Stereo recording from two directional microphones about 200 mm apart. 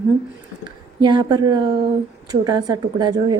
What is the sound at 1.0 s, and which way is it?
A woman's voice, 20° right (ahead or behind).